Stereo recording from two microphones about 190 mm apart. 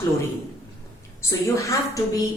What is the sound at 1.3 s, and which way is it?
Speech, 15° left (ahead or behind).